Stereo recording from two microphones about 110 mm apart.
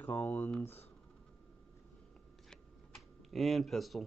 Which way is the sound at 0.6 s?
20° left (ahead or behind).